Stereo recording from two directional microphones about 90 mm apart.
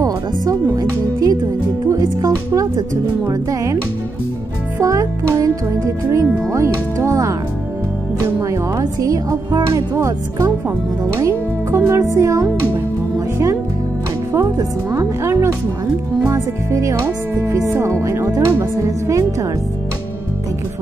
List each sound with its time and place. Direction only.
0.0 s music: 40° right (ahead or behind)
3.3 s speech: 40° right (ahead or behind)
4.7 s speech: 35° right (ahead or behind)
11.1 s music: 35° right (ahead or behind)
11.9 s speech: 35° right (ahead or behind)
14.3 s speech: 35° right (ahead or behind)